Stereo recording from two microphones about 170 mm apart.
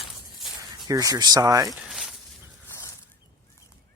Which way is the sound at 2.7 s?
15° left (ahead or behind).